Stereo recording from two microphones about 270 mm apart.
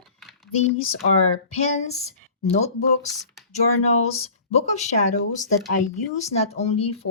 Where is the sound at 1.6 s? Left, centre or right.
Left.